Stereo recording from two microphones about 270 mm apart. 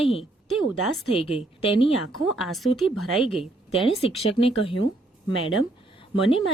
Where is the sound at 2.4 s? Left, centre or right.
Centre.